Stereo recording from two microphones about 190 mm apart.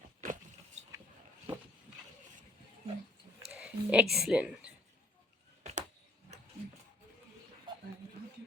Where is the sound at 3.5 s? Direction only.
5° right (ahead or behind).